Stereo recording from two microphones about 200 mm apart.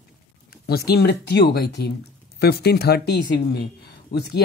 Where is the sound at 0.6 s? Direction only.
50° left (ahead or behind).